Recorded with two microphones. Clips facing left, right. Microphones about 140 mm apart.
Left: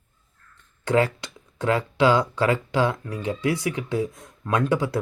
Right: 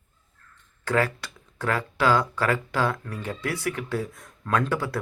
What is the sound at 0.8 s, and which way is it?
Speech, 20° left (ahead or behind).